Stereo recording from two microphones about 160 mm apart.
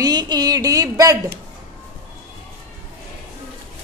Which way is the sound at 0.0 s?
25° right (ahead or behind).